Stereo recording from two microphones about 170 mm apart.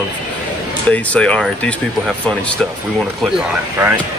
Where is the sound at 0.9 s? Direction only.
5° left (ahead or behind).